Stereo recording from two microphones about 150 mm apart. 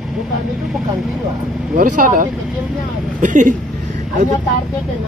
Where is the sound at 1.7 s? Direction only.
60° right (ahead or behind).